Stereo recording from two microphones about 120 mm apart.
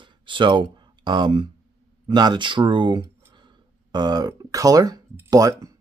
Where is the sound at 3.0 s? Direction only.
20° right (ahead or behind).